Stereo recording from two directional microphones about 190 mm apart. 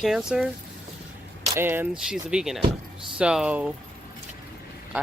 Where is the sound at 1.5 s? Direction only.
10° right (ahead or behind).